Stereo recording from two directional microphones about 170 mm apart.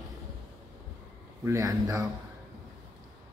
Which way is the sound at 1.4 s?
15° right (ahead or behind).